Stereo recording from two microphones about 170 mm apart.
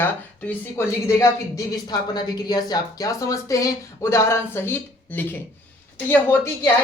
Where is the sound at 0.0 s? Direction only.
10° left (ahead or behind).